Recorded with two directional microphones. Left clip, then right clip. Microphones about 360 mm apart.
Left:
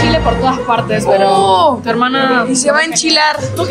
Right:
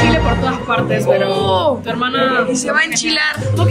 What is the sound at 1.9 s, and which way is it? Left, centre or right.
Speech, left.